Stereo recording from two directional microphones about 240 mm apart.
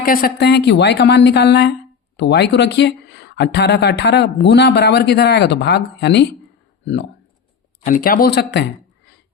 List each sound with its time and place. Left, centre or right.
0.0 s speech: left